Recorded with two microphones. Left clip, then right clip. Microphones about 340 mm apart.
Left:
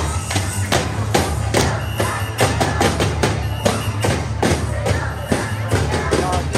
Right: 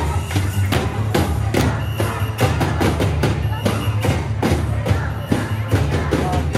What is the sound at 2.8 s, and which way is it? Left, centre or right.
Music, left.